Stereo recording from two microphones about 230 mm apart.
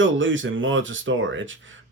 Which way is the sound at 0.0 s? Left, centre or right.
Right.